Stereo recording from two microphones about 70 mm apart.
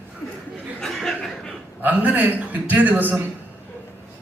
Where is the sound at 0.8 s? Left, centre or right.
Centre.